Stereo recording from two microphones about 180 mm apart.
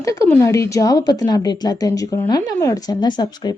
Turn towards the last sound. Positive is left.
turn(degrees=25)  # may be behind; listen again after turning